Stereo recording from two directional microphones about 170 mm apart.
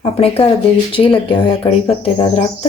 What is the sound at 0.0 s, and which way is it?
Speech, 35° left (ahead or behind).